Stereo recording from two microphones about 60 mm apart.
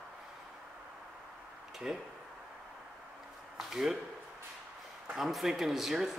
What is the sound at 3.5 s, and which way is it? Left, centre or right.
Speech, centre.